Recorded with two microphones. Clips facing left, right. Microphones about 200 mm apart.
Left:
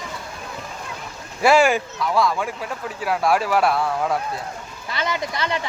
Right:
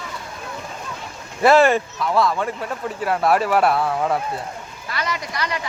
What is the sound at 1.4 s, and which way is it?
Speech, centre (ahead or behind).